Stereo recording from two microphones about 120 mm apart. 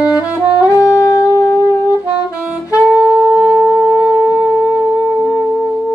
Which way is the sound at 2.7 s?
10° right (ahead or behind).